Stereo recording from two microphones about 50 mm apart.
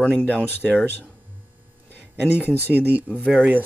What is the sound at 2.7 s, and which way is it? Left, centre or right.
Speech, right.